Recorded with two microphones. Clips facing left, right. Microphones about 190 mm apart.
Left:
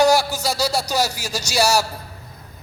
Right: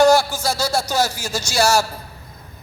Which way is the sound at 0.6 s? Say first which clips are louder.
Right 1 dB; 15° left (ahead or behind).